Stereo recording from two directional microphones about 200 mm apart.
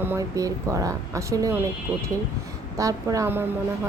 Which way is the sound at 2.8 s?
15° right (ahead or behind).